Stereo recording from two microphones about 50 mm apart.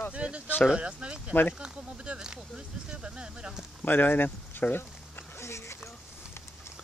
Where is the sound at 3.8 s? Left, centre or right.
Left.